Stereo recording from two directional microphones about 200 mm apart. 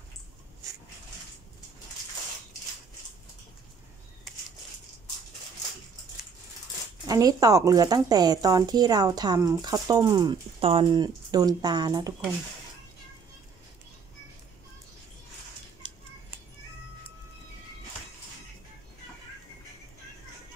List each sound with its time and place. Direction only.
7.1 s a woman's voice: 20° right (ahead or behind)